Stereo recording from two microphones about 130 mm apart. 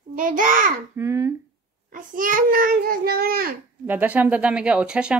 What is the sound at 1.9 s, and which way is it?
Child singing, 90° right.